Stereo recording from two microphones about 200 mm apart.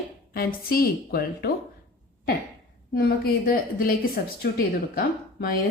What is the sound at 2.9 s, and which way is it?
Speech, 50° left (ahead or behind).